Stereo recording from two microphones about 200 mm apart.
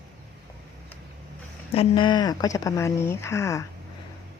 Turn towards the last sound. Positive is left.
turn(degrees=15)  # may be behind; listen again after turning